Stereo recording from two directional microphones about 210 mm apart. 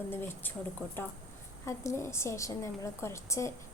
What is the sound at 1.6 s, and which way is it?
A woman's voice, 15° left (ahead or behind).